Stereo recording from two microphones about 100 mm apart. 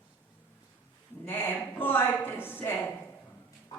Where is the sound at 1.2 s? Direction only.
20° left (ahead or behind).